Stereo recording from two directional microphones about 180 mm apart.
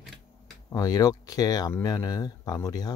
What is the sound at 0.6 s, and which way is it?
Speech, 20° left (ahead or behind).